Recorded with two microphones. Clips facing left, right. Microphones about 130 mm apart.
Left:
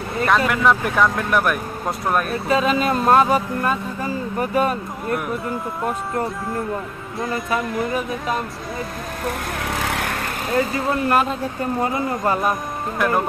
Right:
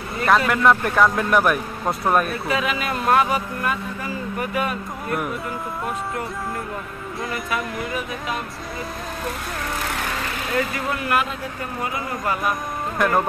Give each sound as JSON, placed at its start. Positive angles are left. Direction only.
{"t": 0.3, "sound": "speech", "side_deg": 0}
{"t": 2.4, "sound": "speech", "side_deg": 30}
{"t": 7.2, "sound": "speech", "side_deg": 25}
{"t": 9.8, "sound": "vehicle", "side_deg": 80}
{"t": 10.5, "sound": "speech", "side_deg": 30}
{"t": 12.9, "sound": "speech", "side_deg": 0}